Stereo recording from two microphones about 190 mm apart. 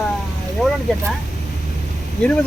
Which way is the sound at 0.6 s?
Centre (ahead or behind).